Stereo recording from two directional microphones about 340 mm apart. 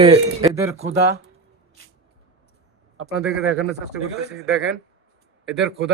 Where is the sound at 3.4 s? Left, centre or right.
Right.